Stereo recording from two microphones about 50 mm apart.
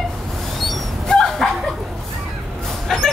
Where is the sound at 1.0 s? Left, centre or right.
Centre.